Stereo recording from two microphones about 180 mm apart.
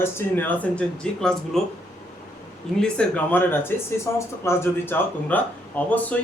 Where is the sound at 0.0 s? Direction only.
10° left (ahead or behind).